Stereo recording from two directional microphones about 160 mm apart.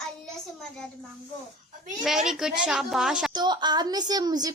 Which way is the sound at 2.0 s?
Centre (ahead or behind).